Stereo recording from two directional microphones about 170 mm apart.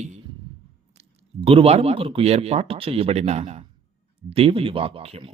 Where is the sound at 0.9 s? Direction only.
35° right (ahead or behind).